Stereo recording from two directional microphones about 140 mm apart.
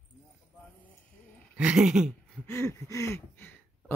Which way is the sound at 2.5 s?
20° left (ahead or behind).